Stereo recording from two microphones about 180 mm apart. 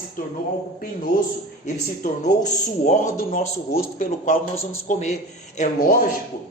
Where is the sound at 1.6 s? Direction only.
45° left (ahead or behind).